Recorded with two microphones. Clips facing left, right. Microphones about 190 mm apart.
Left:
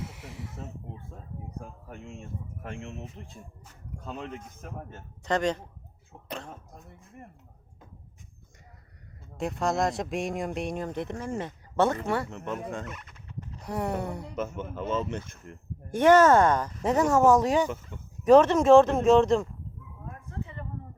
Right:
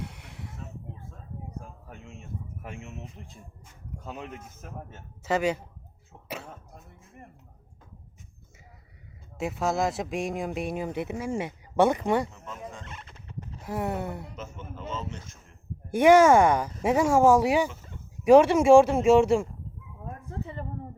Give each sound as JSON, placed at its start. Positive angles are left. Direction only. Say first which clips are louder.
{"t": 0.0, "sound": "snake", "louder": "left 1 dB", "side_deg": 0}
{"t": 2.6, "sound": "speech", "louder": "left 5 dB", "side_deg": -5}
{"t": 9.4, "sound": "speech", "louder": "even", "side_deg": -5}
{"t": 12.3, "sound": "speech", "louder": "left 7 dB", "side_deg": 65}
{"t": 12.8, "sound": "turkey", "louder": "left 4 dB", "side_deg": -30}
{"t": 13.6, "sound": "speech", "louder": "even", "side_deg": 0}
{"t": 14.3, "sound": "speech", "louder": "left 8 dB", "side_deg": 60}
{"t": 15.9, "sound": "speech", "louder": "right 1 dB", "side_deg": -10}